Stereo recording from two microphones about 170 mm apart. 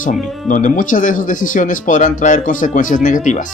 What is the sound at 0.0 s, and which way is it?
Speech, 50° left (ahead or behind).